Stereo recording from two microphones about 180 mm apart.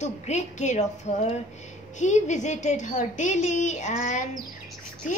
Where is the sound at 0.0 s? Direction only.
40° left (ahead or behind).